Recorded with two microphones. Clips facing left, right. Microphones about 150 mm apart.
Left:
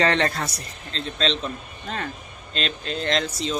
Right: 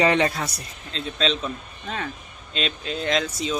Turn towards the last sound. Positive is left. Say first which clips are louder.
# even
turn(degrees=-5)  # may be behind; listen again after turning